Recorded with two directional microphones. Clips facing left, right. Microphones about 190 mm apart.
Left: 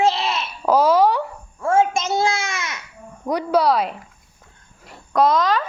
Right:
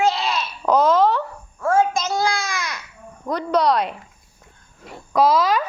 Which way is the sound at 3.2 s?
10° left (ahead or behind).